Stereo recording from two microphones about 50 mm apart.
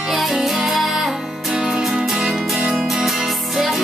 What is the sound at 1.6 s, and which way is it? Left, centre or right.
Music, centre.